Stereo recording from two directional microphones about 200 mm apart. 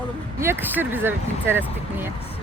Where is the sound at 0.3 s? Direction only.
10° right (ahead or behind).